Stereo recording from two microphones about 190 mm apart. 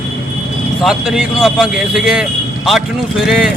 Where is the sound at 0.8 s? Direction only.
Centre (ahead or behind).